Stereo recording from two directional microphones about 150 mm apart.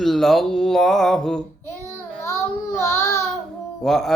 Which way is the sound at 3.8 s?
Centre (ahead or behind).